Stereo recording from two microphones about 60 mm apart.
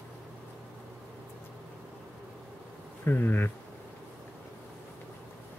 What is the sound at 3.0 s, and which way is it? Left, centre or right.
Bee, left.